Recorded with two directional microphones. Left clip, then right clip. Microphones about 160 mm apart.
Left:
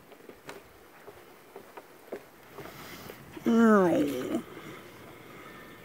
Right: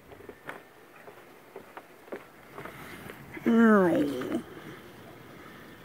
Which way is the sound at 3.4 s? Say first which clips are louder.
Even; centre (ahead or behind).